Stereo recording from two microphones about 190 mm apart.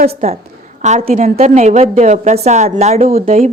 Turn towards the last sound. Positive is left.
turn(degrees=-35)  # may be behind; listen again after turning